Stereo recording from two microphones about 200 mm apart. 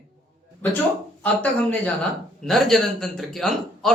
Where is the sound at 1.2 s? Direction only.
5° left (ahead or behind).